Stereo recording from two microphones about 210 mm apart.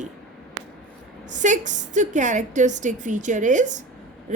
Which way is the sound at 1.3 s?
35° right (ahead or behind).